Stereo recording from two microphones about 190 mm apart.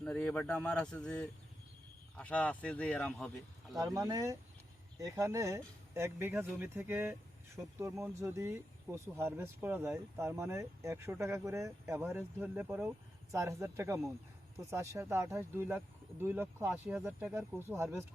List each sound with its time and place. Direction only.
0.0 s speech: 5° left (ahead or behind)
3.8 s speech: 20° right (ahead or behind)